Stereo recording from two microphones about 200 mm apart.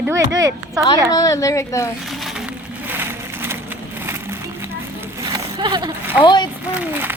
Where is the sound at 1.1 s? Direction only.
15° left (ahead or behind).